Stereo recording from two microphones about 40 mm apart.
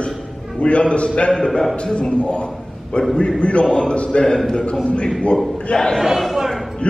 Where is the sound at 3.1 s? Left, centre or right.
Left.